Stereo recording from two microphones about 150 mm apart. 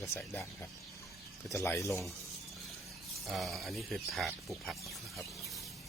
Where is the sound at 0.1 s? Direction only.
15° left (ahead or behind).